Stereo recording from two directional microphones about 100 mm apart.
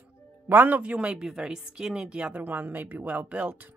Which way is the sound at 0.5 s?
20° right (ahead or behind).